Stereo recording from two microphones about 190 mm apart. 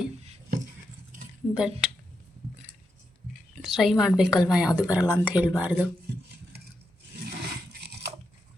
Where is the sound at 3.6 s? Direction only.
Centre (ahead or behind).